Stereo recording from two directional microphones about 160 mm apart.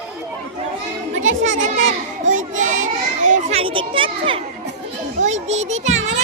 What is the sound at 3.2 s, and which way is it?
A child's voice, 45° right (ahead or behind).